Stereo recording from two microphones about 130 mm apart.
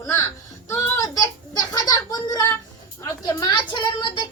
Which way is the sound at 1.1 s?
30° left (ahead or behind).